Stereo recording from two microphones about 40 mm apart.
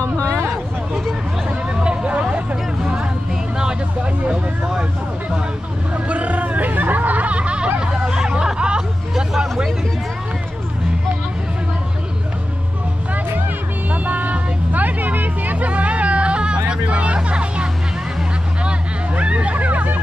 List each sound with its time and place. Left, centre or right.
1.5 s hubbub: right
4.0 s vehicle: right
5.9 s hubbub: right
9.1 s hubbub: centre
13.8 s vehicle: right
16.5 s music: right
18.6 s hubbub: right